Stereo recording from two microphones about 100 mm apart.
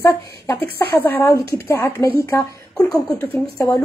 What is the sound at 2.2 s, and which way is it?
Speech, 30° left (ahead or behind).